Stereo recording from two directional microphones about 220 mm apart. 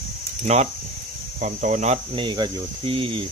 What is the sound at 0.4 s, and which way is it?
Speech, 30° right (ahead or behind).